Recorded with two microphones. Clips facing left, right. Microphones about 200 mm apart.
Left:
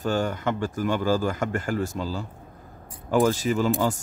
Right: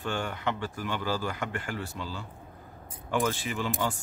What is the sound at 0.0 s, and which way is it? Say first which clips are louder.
Speech: left 7 dB; 40° left (ahead or behind).